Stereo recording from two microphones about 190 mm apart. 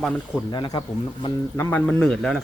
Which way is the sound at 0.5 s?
20° left (ahead or behind).